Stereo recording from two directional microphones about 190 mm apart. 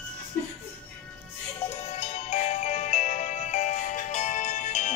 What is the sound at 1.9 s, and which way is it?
Music, 35° left (ahead or behind).